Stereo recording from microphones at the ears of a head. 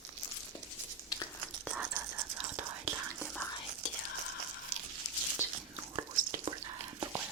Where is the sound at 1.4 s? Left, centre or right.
Right.